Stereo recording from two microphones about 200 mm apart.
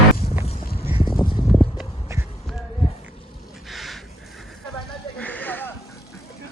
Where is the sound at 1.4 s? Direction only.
Centre (ahead or behind).